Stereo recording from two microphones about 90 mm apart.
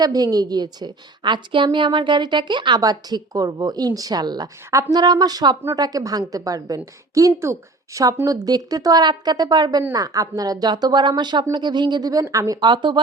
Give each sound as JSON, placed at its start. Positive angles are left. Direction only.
{"t": 0.0, "sound": "a woman's voice", "side_deg": -45}
{"t": 4.7, "sound": "speech", "side_deg": -35}
{"t": 4.9, "sound": "a woman's voice", "side_deg": -50}
{"t": 12.6, "sound": "speech", "side_deg": -60}